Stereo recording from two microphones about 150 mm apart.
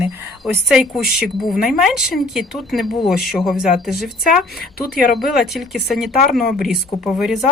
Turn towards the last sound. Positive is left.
turn(degrees=0)  # may be behind; listen again after turning